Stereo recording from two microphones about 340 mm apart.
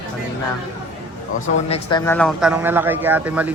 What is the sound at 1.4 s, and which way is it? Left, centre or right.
A man's voice, centre.